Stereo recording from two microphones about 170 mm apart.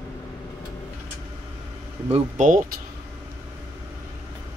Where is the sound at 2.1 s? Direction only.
45° right (ahead or behind).